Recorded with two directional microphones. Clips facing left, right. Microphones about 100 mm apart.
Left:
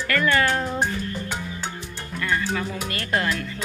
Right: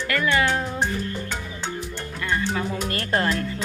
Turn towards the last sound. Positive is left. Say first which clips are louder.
# right 2 dB
turn(degrees=-35)  # may be behind; listen again after turning